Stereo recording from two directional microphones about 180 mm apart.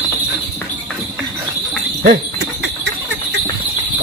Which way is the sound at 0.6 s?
Centre (ahead or behind).